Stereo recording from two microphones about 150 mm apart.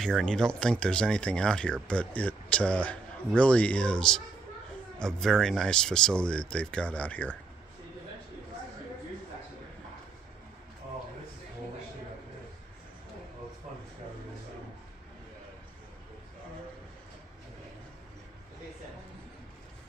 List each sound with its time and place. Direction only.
0.0 s speech: 5° left (ahead or behind)